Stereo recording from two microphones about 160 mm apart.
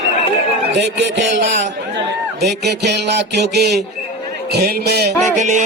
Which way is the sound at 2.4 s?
90° right.